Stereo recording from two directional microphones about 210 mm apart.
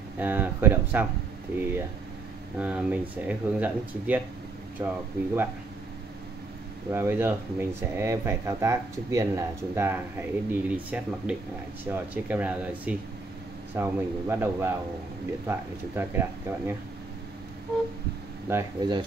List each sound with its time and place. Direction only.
0.2 s speech: 10° right (ahead or behind)
2.6 s speech: 5° right (ahead or behind)
6.9 s speech: 10° right (ahead or behind)
18.5 s speech: 15° right (ahead or behind)